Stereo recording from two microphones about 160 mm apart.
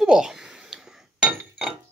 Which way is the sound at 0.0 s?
5° right (ahead or behind).